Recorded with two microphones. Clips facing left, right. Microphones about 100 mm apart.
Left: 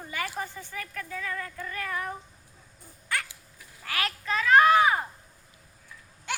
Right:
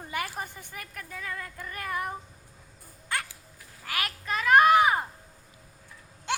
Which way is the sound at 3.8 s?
15° right (ahead or behind).